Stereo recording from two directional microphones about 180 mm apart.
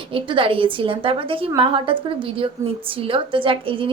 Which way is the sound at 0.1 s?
30° right (ahead or behind).